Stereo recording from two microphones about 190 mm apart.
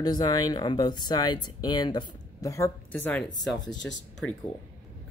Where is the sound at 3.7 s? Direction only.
70° left (ahead or behind).